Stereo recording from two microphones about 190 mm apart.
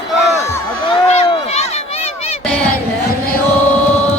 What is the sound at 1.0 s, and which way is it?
Run, 35° left (ahead or behind).